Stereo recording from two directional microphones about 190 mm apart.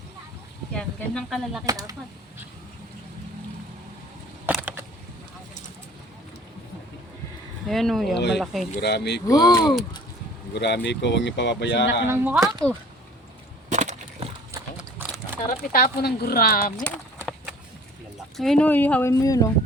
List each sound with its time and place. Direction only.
0.7 s speech: 5° left (ahead or behind)
1.6 s speech: 20° right (ahead or behind)
4.4 s a sound: 10° right (ahead or behind)
7.7 s speech: centre (ahead or behind)
8.1 s speech: 65° left (ahead or behind)
9.2 s speech: 20° left (ahead or behind)
10.5 s speech: 60° left (ahead or behind)
12.0 s speech: 10° right (ahead or behind)
13.7 s wood: 40° right (ahead or behind)
14.5 s horse: 10° right (ahead or behind)
15.4 s speech: 50° left (ahead or behind)
16.8 s a sound: 5° left (ahead or behind)
18.3 s speech: 5° left (ahead or behind); by 19.5 s 20° left (ahead or behind)